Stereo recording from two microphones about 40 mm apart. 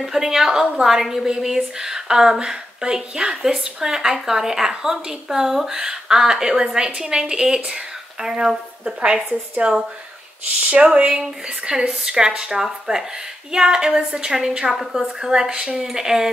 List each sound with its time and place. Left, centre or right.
0.0 s a woman's voice: centre
14.8 s a woman's voice: centre